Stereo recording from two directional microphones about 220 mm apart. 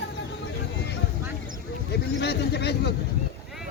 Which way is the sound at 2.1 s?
50° left (ahead or behind).